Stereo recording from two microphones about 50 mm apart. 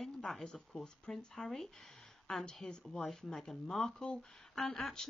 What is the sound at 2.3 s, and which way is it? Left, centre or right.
Speech, centre.